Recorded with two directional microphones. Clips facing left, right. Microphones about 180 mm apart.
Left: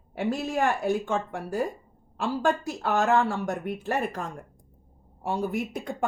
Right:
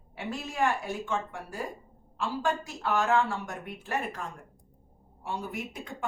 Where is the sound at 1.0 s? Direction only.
45° left (ahead or behind).